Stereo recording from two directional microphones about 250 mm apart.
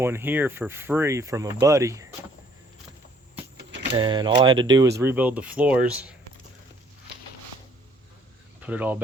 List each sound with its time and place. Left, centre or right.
0.0 s speech: centre
3.9 s speech: centre
8.6 s speech: centre